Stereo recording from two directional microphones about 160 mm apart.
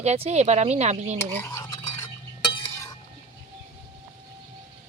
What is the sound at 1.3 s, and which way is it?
Stir, 15° left (ahead or behind).